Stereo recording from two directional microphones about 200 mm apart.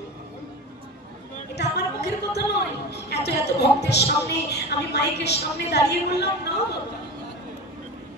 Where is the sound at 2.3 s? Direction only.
55° left (ahead or behind).